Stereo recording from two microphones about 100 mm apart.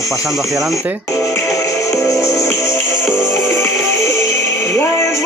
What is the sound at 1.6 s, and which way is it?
Music, 30° left (ahead or behind).